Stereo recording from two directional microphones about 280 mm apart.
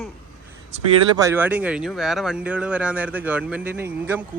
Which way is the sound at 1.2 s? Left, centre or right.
Centre.